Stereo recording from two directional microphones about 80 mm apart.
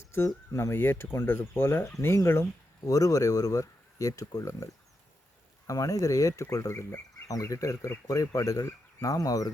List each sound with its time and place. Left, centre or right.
0.3 s speech: left
2.8 s speech: left